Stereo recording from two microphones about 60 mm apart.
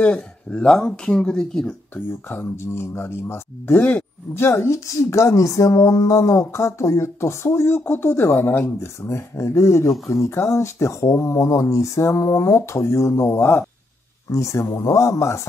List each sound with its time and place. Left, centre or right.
0.0 s speech: centre
2.2 s speech: left
4.5 s speech: left
14.3 s speech: left